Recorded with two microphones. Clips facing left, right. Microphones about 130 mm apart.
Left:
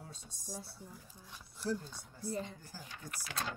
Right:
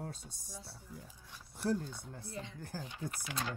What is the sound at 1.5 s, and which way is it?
Speech, 55° right (ahead or behind).